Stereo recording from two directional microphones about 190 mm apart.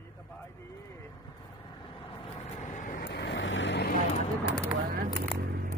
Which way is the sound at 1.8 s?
25° left (ahead or behind).